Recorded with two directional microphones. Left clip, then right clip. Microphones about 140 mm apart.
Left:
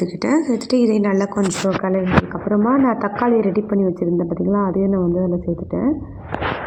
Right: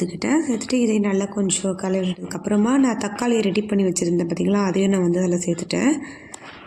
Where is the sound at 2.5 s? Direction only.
25° right (ahead or behind).